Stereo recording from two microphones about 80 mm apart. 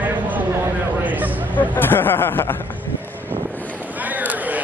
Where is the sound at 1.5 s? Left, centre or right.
Left.